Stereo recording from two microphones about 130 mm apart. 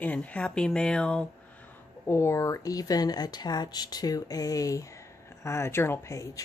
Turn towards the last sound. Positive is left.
turn(degrees=25)  # may be behind; listen again after turning